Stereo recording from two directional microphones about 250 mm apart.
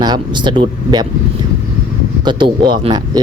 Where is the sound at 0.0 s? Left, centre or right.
Centre.